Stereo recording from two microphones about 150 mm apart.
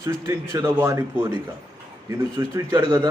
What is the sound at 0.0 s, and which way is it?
Speech, 25° right (ahead or behind).